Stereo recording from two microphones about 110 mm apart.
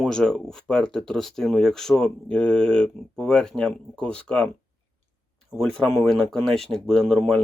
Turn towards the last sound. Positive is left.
turn(degrees=5)  # may be behind; listen again after turning